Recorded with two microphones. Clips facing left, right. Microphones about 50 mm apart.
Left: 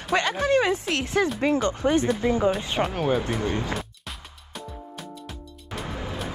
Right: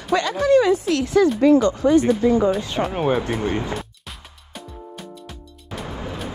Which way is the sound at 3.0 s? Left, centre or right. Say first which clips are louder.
Right 5 dB; centre.